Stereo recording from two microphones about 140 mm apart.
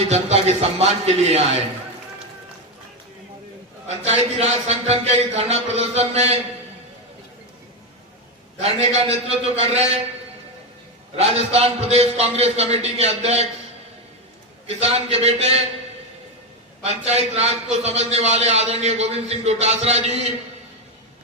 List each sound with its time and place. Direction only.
0.1 s a man's voice: 50° right (ahead or behind)
3.8 s a man's voice: 50° right (ahead or behind)
8.5 s a man's voice: 50° right (ahead or behind)
11.5 s a man's voice: 45° right (ahead or behind)
14.7 s a man's voice: 45° right (ahead or behind)
16.8 s a man's voice: 50° right (ahead or behind)